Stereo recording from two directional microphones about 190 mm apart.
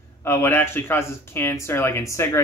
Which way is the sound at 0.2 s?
10° left (ahead or behind).